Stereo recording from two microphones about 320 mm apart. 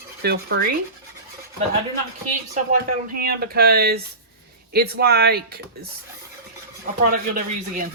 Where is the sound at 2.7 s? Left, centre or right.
Right.